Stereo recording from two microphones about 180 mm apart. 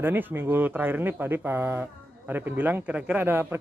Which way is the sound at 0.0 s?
10° right (ahead or behind).